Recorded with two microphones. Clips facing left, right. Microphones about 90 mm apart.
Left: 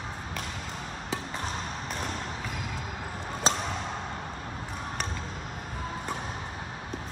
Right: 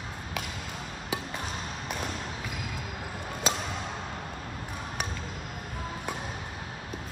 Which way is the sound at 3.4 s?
35° left (ahead or behind).